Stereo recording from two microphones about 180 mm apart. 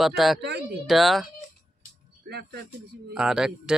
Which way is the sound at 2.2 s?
65° right (ahead or behind).